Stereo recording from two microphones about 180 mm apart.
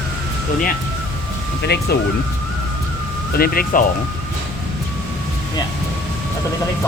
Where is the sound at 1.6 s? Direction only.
65° left (ahead or behind).